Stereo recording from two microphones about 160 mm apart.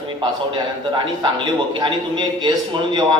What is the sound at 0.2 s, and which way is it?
A man's voice, 30° right (ahead or behind).